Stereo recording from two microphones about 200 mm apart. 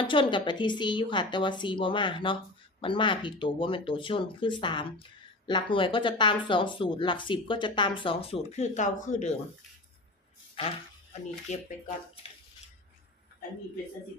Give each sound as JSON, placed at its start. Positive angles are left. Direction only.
{"t": 0.0, "sound": "speech", "side_deg": 25}
{"t": 10.6, "sound": "speech", "side_deg": 25}